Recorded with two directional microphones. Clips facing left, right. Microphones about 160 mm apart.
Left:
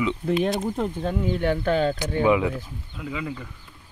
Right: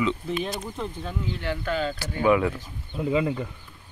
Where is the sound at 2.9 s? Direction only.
30° right (ahead or behind).